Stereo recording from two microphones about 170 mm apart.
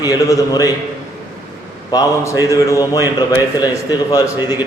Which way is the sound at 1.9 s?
20° left (ahead or behind).